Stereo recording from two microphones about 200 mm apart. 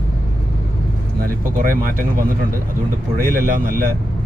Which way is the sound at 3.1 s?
45° right (ahead or behind).